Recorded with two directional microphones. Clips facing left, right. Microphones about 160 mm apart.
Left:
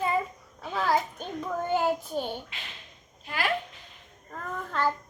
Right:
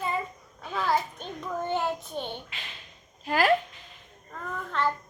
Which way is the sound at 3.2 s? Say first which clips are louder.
Right 7 dB; 40° right (ahead or behind).